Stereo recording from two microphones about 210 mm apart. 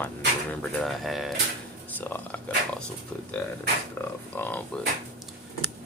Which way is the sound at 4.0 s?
10° left (ahead or behind).